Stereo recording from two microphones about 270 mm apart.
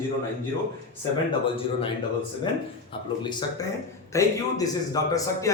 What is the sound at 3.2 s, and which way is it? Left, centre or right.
Speech, centre.